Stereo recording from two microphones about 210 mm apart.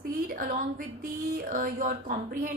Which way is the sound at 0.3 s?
40° right (ahead or behind).